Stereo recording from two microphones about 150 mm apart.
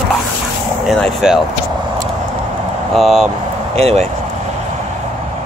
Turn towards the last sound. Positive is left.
turn(degrees=-40)  # may be behind; listen again after turning